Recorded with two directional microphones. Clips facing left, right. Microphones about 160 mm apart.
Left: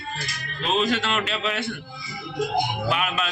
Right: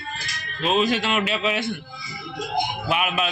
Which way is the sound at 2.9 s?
10° right (ahead or behind).